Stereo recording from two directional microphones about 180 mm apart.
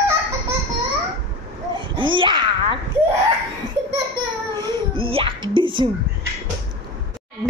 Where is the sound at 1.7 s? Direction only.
25° right (ahead or behind).